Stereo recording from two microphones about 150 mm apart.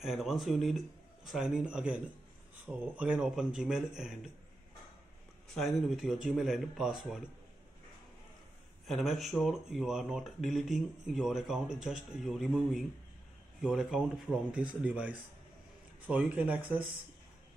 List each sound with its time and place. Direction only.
0.0 s speech: centre (ahead or behind)
5.5 s speech: centre (ahead or behind)
8.8 s speech: centre (ahead or behind)